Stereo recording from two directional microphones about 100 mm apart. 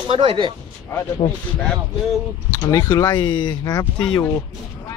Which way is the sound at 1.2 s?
70° left (ahead or behind).